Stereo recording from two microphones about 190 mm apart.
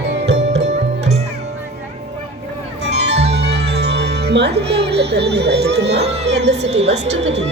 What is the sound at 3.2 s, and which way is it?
Music, 60° right (ahead or behind).